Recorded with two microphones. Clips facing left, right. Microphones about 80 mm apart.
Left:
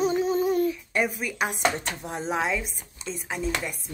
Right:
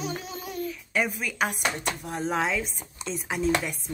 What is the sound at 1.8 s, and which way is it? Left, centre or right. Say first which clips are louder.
Speech: right 1 dB; left.